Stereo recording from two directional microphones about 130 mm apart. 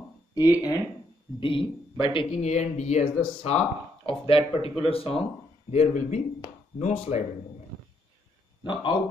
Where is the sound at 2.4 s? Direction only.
60° left (ahead or behind).